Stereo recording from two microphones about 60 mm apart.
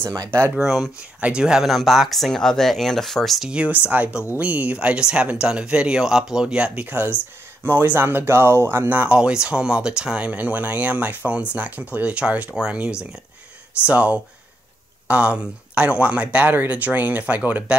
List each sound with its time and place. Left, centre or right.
0.6 s speech: centre
0.9 s speech: centre
3.4 s speech: right
8.8 s speech: right
9.1 s speech: centre